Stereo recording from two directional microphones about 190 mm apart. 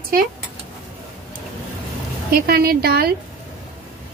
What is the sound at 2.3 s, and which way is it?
Speech, 55° right (ahead or behind).